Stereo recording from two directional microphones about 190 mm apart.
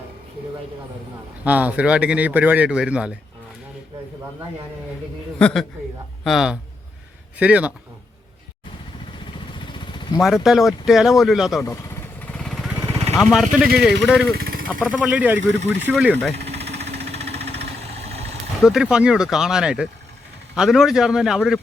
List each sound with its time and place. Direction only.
1.5 s speech: 10° right (ahead or behind)
5.4 s speech: 5° left (ahead or behind)
9.7 s vehicle: 25° left (ahead or behind)
10.2 s speech: centre (ahead or behind)
12.2 s a sound: 5° left (ahead or behind)
12.7 s vehicle: 15° right (ahead or behind)
13.1 s speech: 5° right (ahead or behind)
14.3 s vehicle: 50° right (ahead or behind)
14.8 s speech: 5° left (ahead or behind)
15.0 s speech: 10° right (ahead or behind)
16.6 s vehicle: 35° right (ahead or behind)
17.1 s engine: 35° right (ahead or behind)
18.6 s speech: 5° right (ahead or behind)